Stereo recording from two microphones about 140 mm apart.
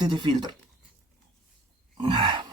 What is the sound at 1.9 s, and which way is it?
Sigh, 35° right (ahead or behind).